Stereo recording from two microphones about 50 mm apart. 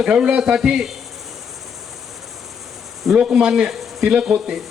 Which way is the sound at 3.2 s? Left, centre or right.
Centre.